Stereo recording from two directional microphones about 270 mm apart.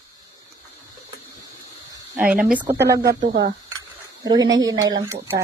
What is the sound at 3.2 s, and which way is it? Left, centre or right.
Speech, right.